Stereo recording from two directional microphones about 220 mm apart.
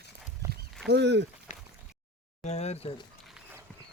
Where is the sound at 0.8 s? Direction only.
50° right (ahead or behind).